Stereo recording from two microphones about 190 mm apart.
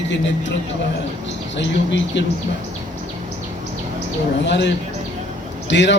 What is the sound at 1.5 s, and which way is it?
Speech, 70° left (ahead or behind).